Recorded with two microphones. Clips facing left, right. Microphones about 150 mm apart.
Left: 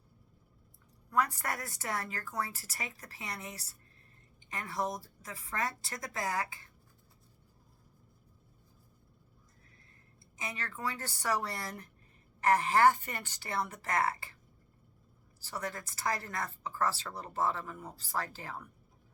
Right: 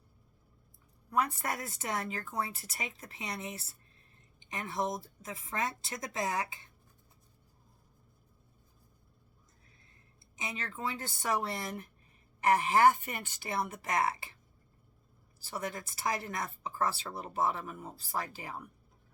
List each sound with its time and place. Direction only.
1.1 s a woman's voice: 20° right (ahead or behind)
10.3 s a woman's voice: 20° right (ahead or behind)
15.4 s speech: 20° right (ahead or behind)